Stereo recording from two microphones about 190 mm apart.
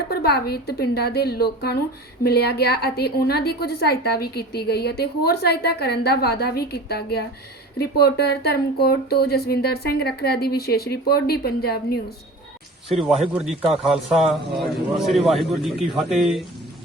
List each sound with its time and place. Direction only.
0.1 s a woman's voice: 55° left (ahead or behind)
12.9 s a man's voice: centre (ahead or behind)